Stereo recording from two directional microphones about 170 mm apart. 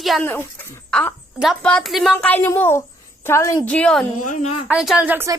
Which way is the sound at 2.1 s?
10° left (ahead or behind).